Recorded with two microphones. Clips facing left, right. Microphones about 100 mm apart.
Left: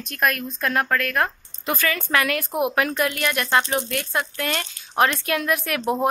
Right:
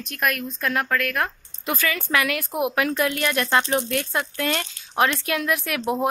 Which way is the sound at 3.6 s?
10° left (ahead or behind).